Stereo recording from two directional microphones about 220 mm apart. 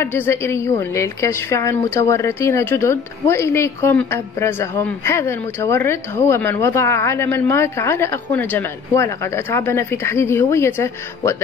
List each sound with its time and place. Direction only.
0.0 s a woman's voice: 10° left (ahead or behind)